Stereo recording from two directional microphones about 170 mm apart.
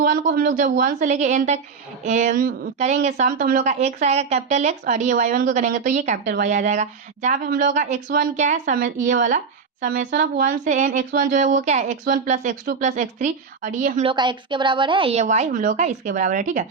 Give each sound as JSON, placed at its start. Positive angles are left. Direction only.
{"t": 0.0, "sound": "speech", "side_deg": -60}
{"t": 3.7, "sound": "speech", "side_deg": -40}
{"t": 7.3, "sound": "speech", "side_deg": -60}
{"t": 14.1, "sound": "a woman's voice", "side_deg": -30}
{"t": 15.2, "sound": "speech", "side_deg": -45}